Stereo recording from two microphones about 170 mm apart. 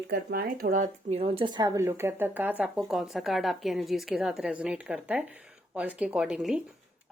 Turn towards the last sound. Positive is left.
turn(degrees=-5)  # may be behind; listen again after turning